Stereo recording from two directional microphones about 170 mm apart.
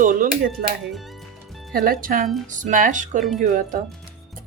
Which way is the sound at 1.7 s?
60° right (ahead or behind).